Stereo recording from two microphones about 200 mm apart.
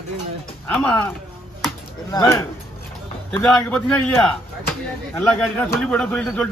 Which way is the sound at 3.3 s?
Centre (ahead or behind).